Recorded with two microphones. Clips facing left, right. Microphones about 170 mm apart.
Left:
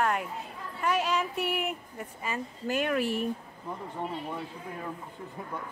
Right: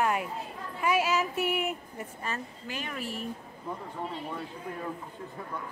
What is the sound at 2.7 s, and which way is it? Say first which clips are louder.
Speech: left 9 dB; 60° left (ahead or behind).